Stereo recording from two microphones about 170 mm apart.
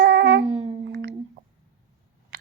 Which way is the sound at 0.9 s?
90° right.